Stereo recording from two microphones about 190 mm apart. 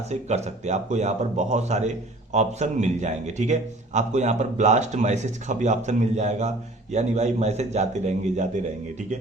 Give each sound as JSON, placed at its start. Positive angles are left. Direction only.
{"t": 0.1, "sound": "a man's voice", "side_deg": -35}